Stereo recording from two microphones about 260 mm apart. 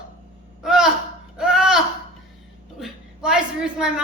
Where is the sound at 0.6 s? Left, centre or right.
Centre.